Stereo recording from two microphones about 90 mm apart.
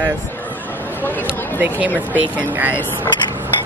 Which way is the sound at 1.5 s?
20° right (ahead or behind).